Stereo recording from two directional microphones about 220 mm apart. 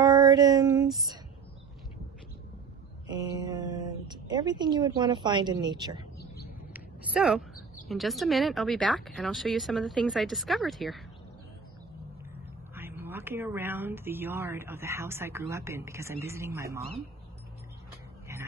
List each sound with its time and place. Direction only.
0.0 s music: 15° right (ahead or behind)
3.1 s a woman's voice: 20° right (ahead or behind)
6.1 s a sound: 45° left (ahead or behind)
6.7 s a sound: 5° right (ahead or behind)
7.9 s speech: centre (ahead or behind)
12.7 s speech: 10° right (ahead or behind)